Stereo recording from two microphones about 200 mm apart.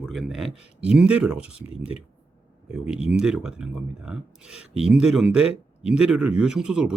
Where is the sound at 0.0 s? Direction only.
Centre (ahead or behind).